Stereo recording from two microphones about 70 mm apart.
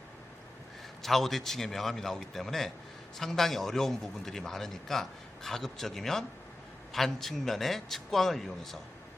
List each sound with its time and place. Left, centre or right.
1.0 s a man's voice: centre